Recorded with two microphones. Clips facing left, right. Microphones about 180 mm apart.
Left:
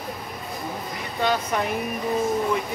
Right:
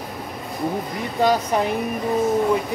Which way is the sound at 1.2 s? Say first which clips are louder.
Right 4 dB; 30° right (ahead or behind).